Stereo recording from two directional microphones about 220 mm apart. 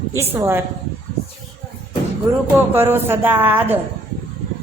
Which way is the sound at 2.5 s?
10° right (ahead or behind).